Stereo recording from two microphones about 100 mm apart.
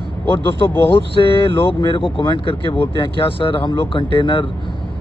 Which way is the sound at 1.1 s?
60° left (ahead or behind).